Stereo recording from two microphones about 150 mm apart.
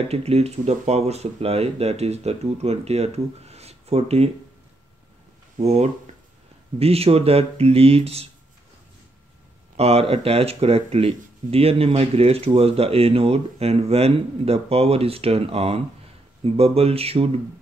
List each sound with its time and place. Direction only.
0.1 s speech: 45° right (ahead or behind)
5.6 s speech: 45° right (ahead or behind)
9.8 s speech: 40° right (ahead or behind)